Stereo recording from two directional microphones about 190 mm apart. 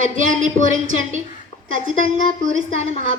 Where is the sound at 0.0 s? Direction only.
40° right (ahead or behind).